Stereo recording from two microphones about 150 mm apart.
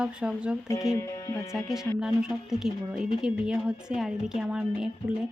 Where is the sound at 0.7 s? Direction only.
20° left (ahead or behind).